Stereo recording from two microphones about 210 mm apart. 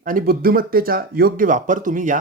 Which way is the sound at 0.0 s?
40° right (ahead or behind).